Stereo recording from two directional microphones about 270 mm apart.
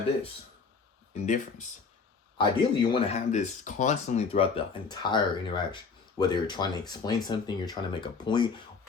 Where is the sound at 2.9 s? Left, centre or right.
Left.